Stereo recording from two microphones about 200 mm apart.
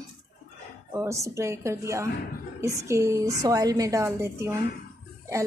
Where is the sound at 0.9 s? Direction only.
15° right (ahead or behind).